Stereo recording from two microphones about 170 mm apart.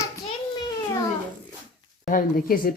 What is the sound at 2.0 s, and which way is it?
Speech, 55° left (ahead or behind).